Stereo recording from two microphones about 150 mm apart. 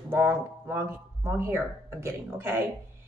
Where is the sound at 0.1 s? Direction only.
15° right (ahead or behind).